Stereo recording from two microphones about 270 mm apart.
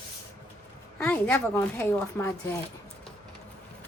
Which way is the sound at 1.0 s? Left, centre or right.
Centre.